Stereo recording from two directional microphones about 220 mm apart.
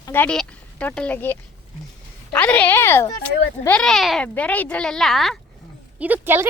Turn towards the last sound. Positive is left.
turn(degrees=-10)  # may be behind; listen again after turning